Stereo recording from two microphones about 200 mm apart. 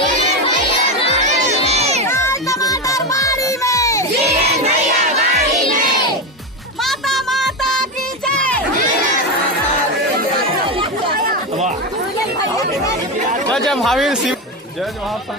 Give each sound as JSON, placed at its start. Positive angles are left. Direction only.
{"t": 1.7, "sound": "crowd", "side_deg": -30}
{"t": 2.0, "sound": "music", "side_deg": 15}
{"t": 4.2, "sound": "music", "side_deg": -35}
{"t": 6.8, "sound": "music", "side_deg": 0}
{"t": 8.3, "sound": "a sound", "side_deg": 5}
{"t": 11.2, "sound": "chatter", "side_deg": -45}
{"t": 13.5, "sound": "a sound", "side_deg": 0}